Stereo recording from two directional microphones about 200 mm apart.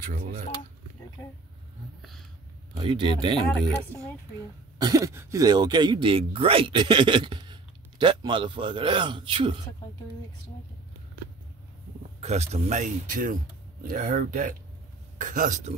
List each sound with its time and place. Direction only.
2.0 s a sound: centre (ahead or behind)
2.7 s speech: 25° right (ahead or behind)
4.7 s speech: 20° right (ahead or behind)
12.2 s speech: 35° right (ahead or behind)